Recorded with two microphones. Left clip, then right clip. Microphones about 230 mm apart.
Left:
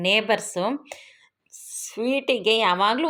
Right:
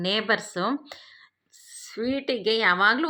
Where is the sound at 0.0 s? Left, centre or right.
Right.